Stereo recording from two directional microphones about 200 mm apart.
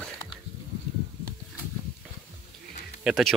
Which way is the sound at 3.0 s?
Centre (ahead or behind).